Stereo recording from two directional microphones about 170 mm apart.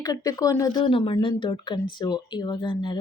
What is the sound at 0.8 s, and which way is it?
A woman's voice, 30° left (ahead or behind).